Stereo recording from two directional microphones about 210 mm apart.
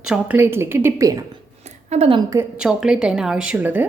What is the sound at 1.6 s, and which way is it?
Speech, 35° right (ahead or behind).